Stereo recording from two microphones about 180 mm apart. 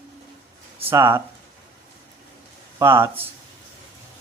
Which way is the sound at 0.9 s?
20° right (ahead or behind).